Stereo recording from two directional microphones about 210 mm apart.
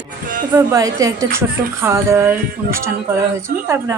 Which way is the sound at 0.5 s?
15° right (ahead or behind).